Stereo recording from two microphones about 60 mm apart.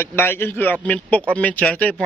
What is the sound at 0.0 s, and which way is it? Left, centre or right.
A man's voice, left.